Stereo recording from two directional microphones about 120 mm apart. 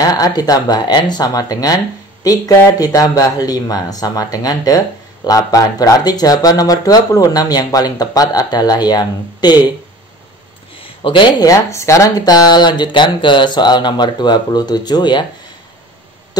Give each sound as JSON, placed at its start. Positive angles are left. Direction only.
{"t": 0.0, "sound": "speech", "side_deg": 35}
{"t": 11.1, "sound": "speech", "side_deg": 40}
{"t": 11.4, "sound": "speech", "side_deg": 25}